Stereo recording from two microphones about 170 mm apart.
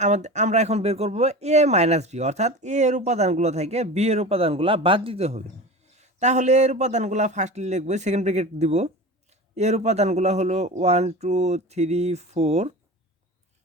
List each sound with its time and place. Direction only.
0.0 s a man's voice: 45° right (ahead or behind)